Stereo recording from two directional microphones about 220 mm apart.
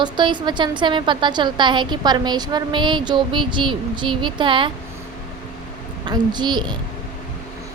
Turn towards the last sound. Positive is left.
turn(degrees=-20)  # may be behind; listen again after turning